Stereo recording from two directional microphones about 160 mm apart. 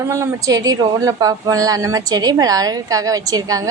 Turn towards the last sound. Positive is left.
turn(degrees=-20)  # may be behind; listen again after turning